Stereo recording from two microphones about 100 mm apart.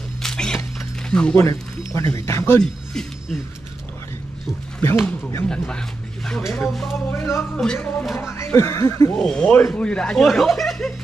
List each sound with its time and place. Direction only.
0.2 s a sound: 5° left (ahead or behind)
1.4 s speech: 30° left (ahead or behind)
2.6 s speech: 5° left (ahead or behind)
4.8 s speech: 20° left (ahead or behind); by 7.0 s centre (ahead or behind)
7.1 s speech: 25° left (ahead or behind)
7.5 s speech: 10° left (ahead or behind)
8.2 s speech: 30° left (ahead or behind)
9.1 s speech: 10° left (ahead or behind)